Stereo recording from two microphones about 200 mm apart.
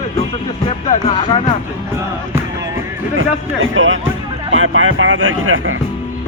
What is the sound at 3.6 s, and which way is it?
Speech, 75° right (ahead or behind).